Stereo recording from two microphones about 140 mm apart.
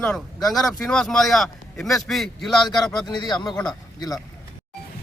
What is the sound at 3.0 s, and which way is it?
Speech, 30° left (ahead or behind).